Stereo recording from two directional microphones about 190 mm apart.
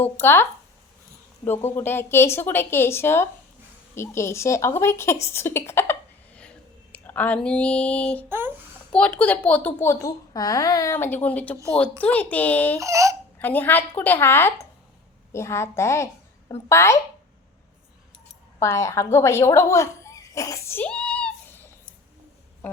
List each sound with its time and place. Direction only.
0.0 s a woman's voice: 10° left (ahead or behind)
1.5 s a woman's voice: 10° left (ahead or behind)
8.3 s speech: 10° right (ahead or behind)
8.9 s a woman's voice: 5° left (ahead or behind)
12.8 s speech: 15° right (ahead or behind)
13.4 s a woman's voice: 10° left (ahead or behind)
18.6 s speech: 15° left (ahead or behind)